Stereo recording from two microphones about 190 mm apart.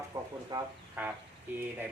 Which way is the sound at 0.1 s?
15° right (ahead or behind).